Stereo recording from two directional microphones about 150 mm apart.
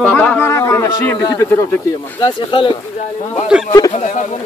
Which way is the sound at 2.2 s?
30° left (ahead or behind).